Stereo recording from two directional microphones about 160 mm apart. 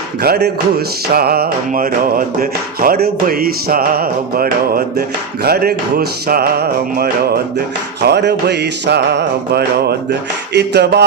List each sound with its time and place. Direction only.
0.2 s music: 80° right
8.0 s music: 90° right